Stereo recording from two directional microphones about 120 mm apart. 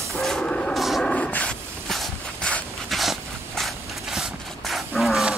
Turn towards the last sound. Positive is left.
turn(degrees=0)  # may be behind; listen again after turning